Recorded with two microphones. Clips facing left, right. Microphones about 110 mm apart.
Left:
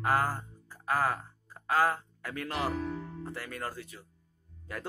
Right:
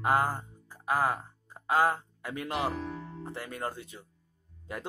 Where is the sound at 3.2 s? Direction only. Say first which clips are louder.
Right 2 dB; 20° right (ahead or behind).